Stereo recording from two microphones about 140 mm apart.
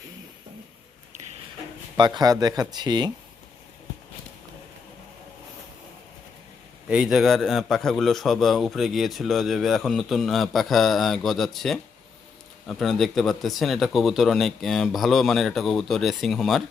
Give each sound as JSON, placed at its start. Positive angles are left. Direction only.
{"t": 2.0, "sound": "speech", "side_deg": -30}
{"t": 6.8, "sound": "a man's voice", "side_deg": -5}